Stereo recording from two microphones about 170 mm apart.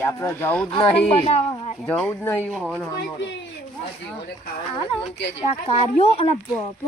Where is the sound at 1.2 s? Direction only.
40° left (ahead or behind).